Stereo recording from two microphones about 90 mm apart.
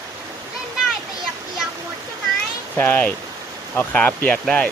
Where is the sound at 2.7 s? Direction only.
25° left (ahead or behind).